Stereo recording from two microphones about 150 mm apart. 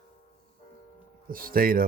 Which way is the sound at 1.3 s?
75° right (ahead or behind).